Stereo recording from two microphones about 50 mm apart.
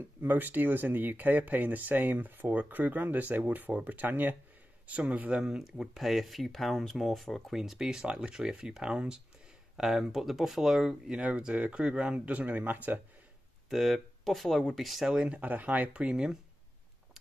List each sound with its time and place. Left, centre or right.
0.2 s speech: right
5.3 s speech: centre
9.8 s speech: centre
11.1 s speech: centre
12.4 s speech: right
13.7 s speech: centre
15.2 s speech: right
15.9 s speech: right